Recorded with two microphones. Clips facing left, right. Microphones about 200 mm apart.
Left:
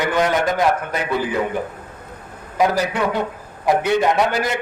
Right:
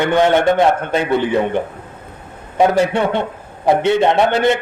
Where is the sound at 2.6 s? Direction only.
25° right (ahead or behind).